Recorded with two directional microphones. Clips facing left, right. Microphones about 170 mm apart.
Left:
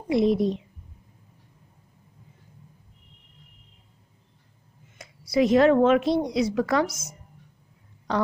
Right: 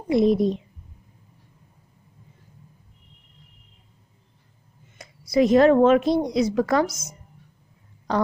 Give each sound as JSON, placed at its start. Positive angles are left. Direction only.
{"t": 0.1, "sound": "a child's voice", "side_deg": -45}
{"t": 5.3, "sound": "a woman's voice", "side_deg": -40}
{"t": 6.9, "sound": "speech", "side_deg": -20}